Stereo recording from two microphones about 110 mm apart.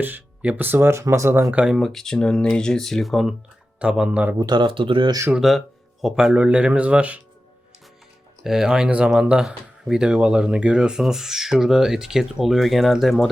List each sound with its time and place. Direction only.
0.0 s speech: 15° right (ahead or behind)
1.5 s speech: 5° right (ahead or behind)
4.4 s speech: 40° right (ahead or behind)
5.3 s speech: centre (ahead or behind)
8.4 s speech: 5° right (ahead or behind)